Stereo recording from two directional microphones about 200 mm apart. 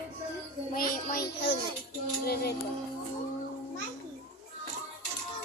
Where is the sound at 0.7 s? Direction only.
45° left (ahead or behind).